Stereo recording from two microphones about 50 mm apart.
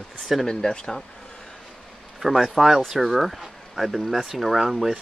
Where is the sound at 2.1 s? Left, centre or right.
Centre.